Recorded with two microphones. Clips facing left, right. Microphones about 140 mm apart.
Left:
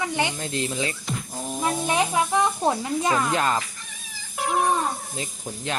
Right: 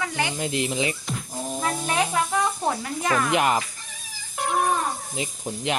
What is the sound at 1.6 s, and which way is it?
Speech, 15° left (ahead or behind).